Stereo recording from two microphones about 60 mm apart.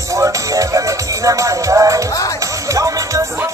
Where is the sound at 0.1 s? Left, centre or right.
Right.